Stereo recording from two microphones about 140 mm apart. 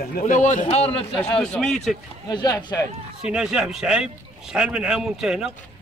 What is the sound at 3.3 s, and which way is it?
A man's voice, 5° right (ahead or behind).